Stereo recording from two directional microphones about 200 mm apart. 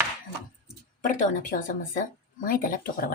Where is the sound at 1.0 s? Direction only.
40° left (ahead or behind).